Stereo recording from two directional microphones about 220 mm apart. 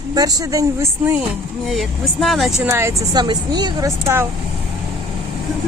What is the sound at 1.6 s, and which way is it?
Speech, centre (ahead or behind).